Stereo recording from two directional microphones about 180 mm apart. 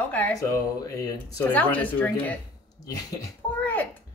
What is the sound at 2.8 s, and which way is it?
Speech, 20° left (ahead or behind).